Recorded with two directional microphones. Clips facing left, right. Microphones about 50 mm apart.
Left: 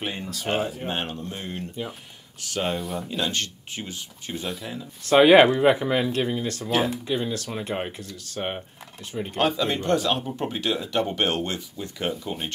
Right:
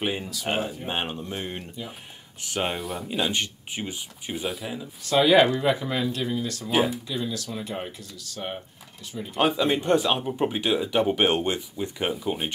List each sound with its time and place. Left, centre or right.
0.0 s speech: centre
2.7 s speech: centre
3.1 s speech: centre
5.1 s speech: left
9.4 s speech: centre